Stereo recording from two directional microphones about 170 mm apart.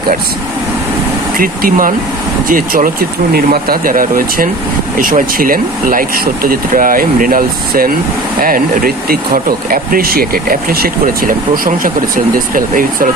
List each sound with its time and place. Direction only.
1.4 s speech: 55° right (ahead or behind)